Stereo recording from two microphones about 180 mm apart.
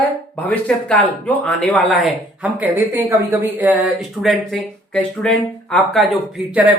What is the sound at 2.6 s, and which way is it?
Speech, 15° right (ahead or behind).